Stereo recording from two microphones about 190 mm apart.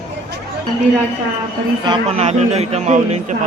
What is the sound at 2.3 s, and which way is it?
A man's voice, 35° right (ahead or behind).